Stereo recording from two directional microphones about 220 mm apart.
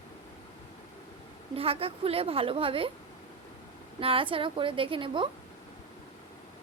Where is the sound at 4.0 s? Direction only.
25° right (ahead or behind).